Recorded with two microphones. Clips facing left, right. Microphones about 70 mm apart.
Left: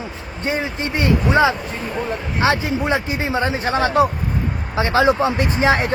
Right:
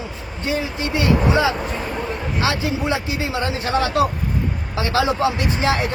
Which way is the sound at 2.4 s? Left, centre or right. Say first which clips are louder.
Left 4 dB; left.